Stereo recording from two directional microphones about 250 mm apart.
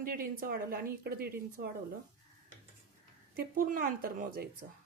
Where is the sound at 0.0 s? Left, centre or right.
Right.